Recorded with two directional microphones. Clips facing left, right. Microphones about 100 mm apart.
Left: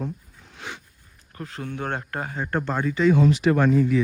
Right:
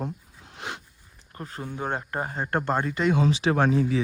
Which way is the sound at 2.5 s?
50° right (ahead or behind).